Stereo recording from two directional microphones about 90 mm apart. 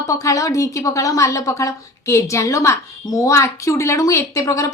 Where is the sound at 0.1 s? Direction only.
40° left (ahead or behind).